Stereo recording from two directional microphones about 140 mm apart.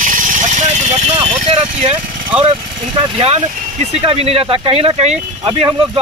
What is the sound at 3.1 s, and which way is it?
Speech, 45° right (ahead or behind).